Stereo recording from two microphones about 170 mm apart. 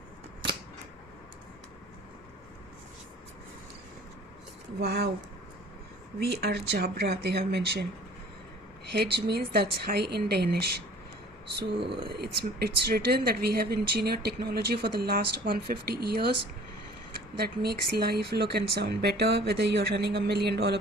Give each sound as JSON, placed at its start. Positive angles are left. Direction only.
{"t": 4.8, "sound": "speech", "side_deg": -70}
{"t": 6.1, "sound": "speech", "side_deg": -70}
{"t": 8.9, "sound": "speech", "side_deg": -70}
{"t": 11.9, "sound": "speech", "side_deg": -30}
{"t": 12.2, "sound": "speech", "side_deg": -70}
{"t": 17.3, "sound": "speech", "side_deg": -65}